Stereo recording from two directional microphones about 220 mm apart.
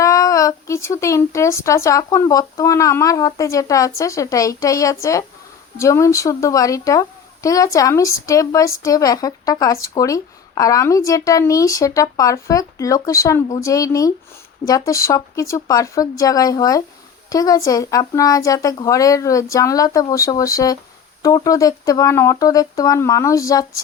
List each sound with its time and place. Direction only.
0.0 s speech: 15° left (ahead or behind)